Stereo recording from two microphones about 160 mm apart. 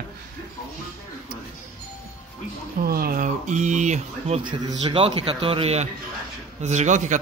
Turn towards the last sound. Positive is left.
turn(degrees=-50)  # may be behind; listen again after turning